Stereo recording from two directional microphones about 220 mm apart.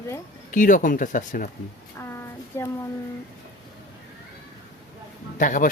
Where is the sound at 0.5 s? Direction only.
35° left (ahead or behind).